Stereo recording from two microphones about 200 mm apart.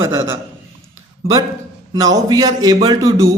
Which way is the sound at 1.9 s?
20° right (ahead or behind).